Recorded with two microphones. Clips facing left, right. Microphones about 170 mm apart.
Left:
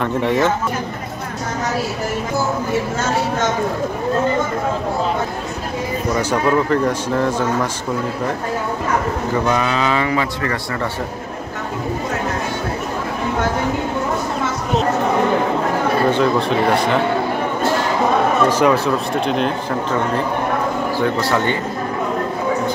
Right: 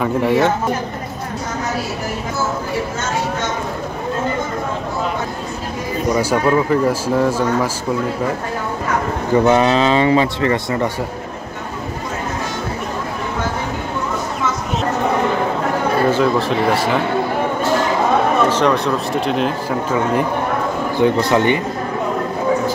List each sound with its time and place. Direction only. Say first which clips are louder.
0.0 s speech: right 2 dB; 5° right (ahead or behind)
6.1 s speech: right 1 dB; 5° right (ahead or behind)
9.5 s speech: right 5 dB; 25° right (ahead or behind)
16.1 s speech: even; centre (ahead or behind)
18.5 s speech: left 1 dB; 10° left (ahead or behind)
21.0 s speech: right 5 dB; 20° right (ahead or behind)